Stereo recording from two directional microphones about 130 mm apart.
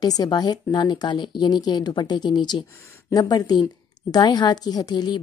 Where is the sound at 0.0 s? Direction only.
30° left (ahead or behind).